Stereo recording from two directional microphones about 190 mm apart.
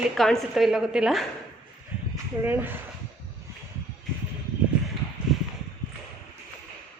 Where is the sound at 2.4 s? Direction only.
10° right (ahead or behind).